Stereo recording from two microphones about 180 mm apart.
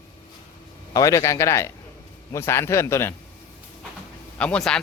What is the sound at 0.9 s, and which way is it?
Speech, 20° left (ahead or behind).